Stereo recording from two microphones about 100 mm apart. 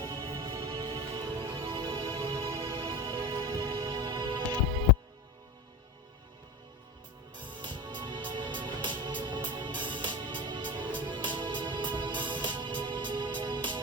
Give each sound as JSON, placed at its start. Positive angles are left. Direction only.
{"t": 0.0, "sound": "music", "side_deg": -40}
{"t": 0.3, "sound": "music", "side_deg": -55}
{"t": 0.5, "sound": "music", "side_deg": -40}
{"t": 2.7, "sound": "music", "side_deg": -55}
{"t": 7.4, "sound": "music", "side_deg": -50}